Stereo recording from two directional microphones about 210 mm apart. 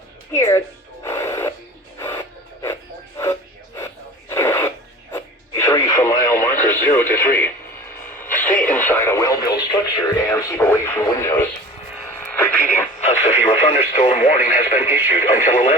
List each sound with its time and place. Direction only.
0.3 s speech: 15° left (ahead or behind)
1.0 s music: 10° left (ahead or behind)
2.0 s a sound: 10° left (ahead or behind)
3.8 s a sound: 10° left (ahead or behind)
5.1 s radio: 15° left (ahead or behind)
13.0 s radio: 30° left (ahead or behind)
14.8 s radio: 10° right (ahead or behind)
15.1 s radio: 40° left (ahead or behind)